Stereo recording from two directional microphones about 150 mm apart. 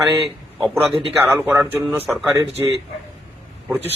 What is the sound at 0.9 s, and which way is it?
Speech, 35° right (ahead or behind).